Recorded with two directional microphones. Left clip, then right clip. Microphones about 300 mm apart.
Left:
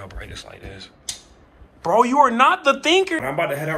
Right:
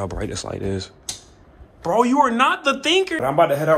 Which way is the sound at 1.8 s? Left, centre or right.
Centre.